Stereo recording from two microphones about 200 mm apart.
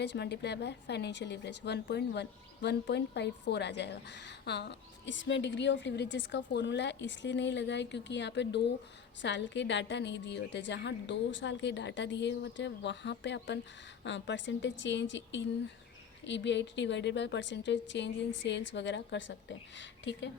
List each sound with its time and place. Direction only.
0.0 s a woman's voice: 60° left (ahead or behind)